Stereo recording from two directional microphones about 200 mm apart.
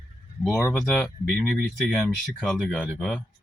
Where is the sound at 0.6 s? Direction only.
5° left (ahead or behind).